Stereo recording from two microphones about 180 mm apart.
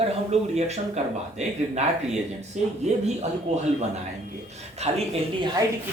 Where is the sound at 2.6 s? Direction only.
40° right (ahead or behind).